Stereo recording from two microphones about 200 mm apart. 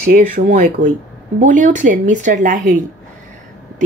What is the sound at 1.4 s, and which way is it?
A woman's voice, 40° right (ahead or behind).